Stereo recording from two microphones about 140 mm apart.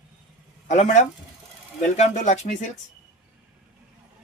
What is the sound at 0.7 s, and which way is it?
Speech, 60° left (ahead or behind).